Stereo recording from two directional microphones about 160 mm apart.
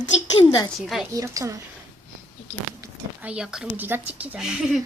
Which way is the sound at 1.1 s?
20° right (ahead or behind).